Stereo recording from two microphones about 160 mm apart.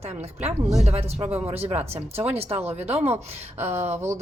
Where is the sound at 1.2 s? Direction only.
15° right (ahead or behind).